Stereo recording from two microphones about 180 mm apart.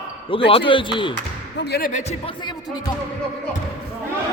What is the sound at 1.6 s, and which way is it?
Speech, 65° left (ahead or behind).